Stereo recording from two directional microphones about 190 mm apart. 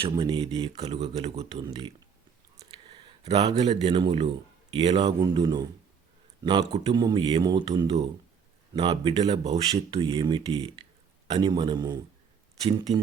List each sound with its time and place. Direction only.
0.0 s speech: 25° right (ahead or behind)
2.6 s a sound: 25° right (ahead or behind)
3.6 s a man's voice: 35° right (ahead or behind)